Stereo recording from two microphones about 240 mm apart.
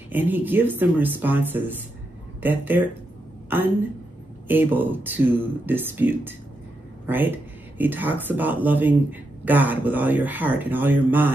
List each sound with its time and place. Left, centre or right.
0.1 s a woman's voice: centre